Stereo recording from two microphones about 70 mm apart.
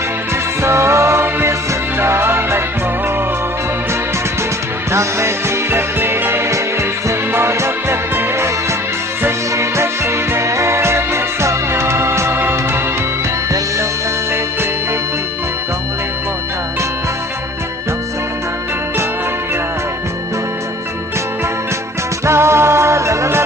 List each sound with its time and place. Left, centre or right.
0.6 s music: right
4.9 s music: right
22.3 s music: right